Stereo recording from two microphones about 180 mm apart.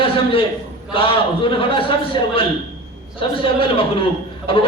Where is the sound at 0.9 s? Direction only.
30° left (ahead or behind).